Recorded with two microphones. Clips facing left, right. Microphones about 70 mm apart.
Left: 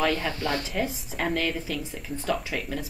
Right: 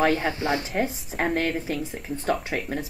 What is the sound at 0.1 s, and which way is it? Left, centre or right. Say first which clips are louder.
Speech: right 3 dB; right.